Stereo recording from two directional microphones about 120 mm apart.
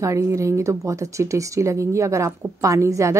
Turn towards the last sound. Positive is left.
turn(degrees=-25)  # may be behind; listen again after turning